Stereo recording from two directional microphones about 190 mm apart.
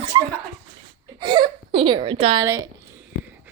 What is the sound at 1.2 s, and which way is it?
Whimper, 25° right (ahead or behind).